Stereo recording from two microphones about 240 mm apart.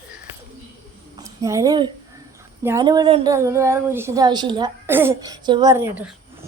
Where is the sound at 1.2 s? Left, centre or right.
Centre.